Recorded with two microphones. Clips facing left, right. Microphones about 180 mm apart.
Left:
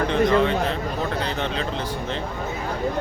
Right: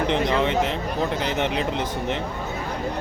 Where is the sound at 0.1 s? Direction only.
20° right (ahead or behind).